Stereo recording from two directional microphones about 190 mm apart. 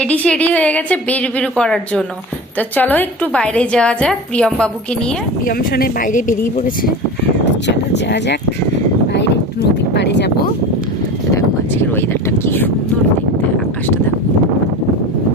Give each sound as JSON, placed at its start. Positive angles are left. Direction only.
{"t": 0.0, "sound": "a woman's voice", "side_deg": 5}
{"t": 5.5, "sound": "speech", "side_deg": 50}
{"t": 7.9, "sound": "speech", "side_deg": 65}
{"t": 9.1, "sound": "a sound", "side_deg": 65}
{"t": 11.9, "sound": "a woman's voice", "side_deg": 10}